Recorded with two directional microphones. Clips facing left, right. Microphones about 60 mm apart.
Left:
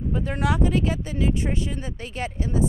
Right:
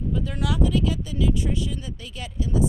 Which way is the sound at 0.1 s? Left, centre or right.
Left.